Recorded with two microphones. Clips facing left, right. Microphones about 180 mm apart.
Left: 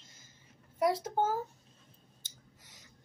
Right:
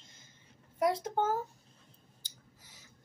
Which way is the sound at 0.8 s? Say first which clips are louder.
Even; 10° left (ahead or behind).